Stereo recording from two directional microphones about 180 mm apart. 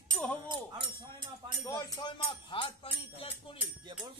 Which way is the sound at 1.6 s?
20° left (ahead or behind).